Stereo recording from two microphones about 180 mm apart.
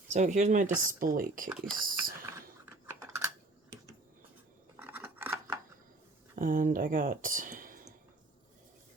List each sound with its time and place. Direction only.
0.1 s speech: 40° right (ahead or behind)
1.5 s speech: centre (ahead or behind)
1.8 s speech: 50° right (ahead or behind)
2.8 s typing: 15° right (ahead or behind)
4.8 s scissors: 10° right (ahead or behind)
6.3 s speech: 50° right (ahead or behind)